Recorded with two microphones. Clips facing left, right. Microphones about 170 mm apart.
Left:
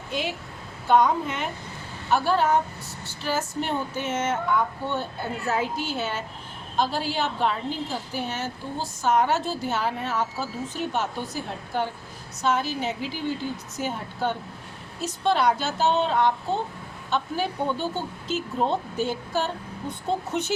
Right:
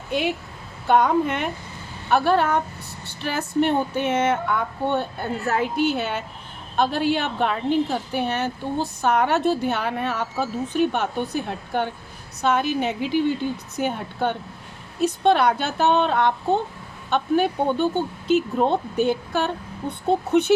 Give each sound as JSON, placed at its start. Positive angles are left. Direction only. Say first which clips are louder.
{"t": 0.9, "sound": "a woman's voice", "louder": "right 2 dB", "side_deg": -60}